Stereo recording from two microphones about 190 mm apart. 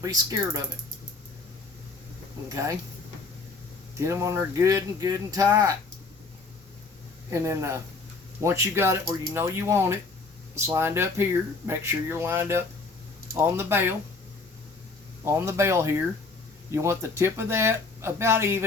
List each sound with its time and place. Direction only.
0.0 s speech: 20° right (ahead or behind)
3.9 s speech: 15° right (ahead or behind)
7.3 s speech: 15° right (ahead or behind)
15.2 s speech: 15° right (ahead or behind)